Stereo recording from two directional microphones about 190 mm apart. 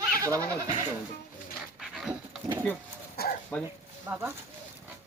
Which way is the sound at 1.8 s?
Centre (ahead or behind).